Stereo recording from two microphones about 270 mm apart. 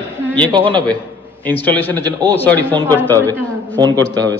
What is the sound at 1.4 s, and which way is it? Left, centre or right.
A man's voice, centre.